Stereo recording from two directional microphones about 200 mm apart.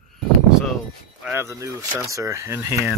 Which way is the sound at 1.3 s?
15° right (ahead or behind).